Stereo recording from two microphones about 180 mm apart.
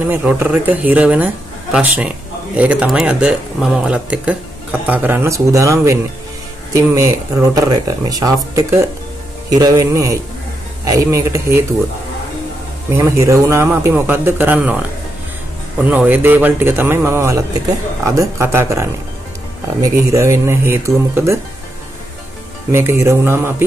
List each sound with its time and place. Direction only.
0.0 s speech: 10° right (ahead or behind)
12.9 s speech: 15° right (ahead or behind)
15.9 s speech: 10° right (ahead or behind)
22.7 s speech: 15° right (ahead or behind)